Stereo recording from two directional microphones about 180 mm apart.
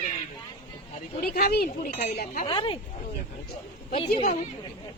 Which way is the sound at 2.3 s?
30° left (ahead or behind).